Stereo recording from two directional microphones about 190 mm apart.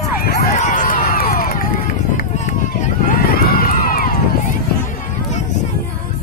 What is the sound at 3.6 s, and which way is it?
Run, 50° left (ahead or behind).